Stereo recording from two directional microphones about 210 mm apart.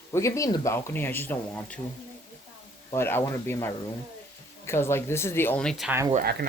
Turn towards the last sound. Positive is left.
turn(degrees=-45)  # may be behind; listen again after turning